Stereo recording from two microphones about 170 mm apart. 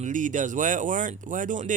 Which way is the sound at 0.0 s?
50° right (ahead or behind).